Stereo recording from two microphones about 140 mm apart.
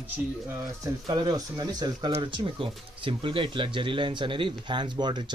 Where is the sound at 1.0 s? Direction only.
25° right (ahead or behind).